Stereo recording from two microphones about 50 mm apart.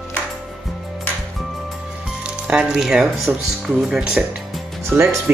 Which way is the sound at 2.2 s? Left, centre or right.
Right.